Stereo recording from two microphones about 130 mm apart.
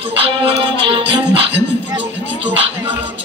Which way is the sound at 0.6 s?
40° right (ahead or behind).